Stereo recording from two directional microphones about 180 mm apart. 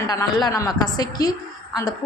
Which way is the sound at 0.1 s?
20° left (ahead or behind).